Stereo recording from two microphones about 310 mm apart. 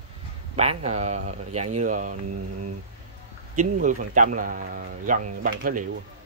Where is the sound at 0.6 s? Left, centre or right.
Right.